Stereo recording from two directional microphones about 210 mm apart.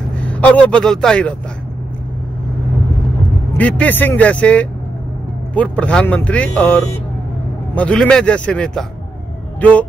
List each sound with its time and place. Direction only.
0.3 s a man's voice: 5° left (ahead or behind)
3.5 s a man's voice: 5° left (ahead or behind)